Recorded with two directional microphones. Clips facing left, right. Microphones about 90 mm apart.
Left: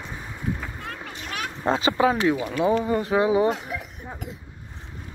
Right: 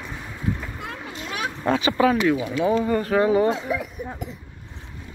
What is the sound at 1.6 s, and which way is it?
Speech, 25° left (ahead or behind).